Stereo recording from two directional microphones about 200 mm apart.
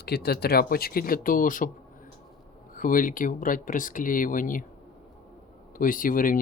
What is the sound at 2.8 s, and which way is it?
Speech, 45° left (ahead or behind).